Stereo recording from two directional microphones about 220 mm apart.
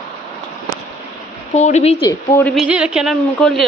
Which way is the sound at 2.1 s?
10° left (ahead or behind).